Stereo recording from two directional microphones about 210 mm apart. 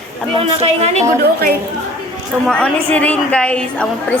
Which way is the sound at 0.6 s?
30° right (ahead or behind).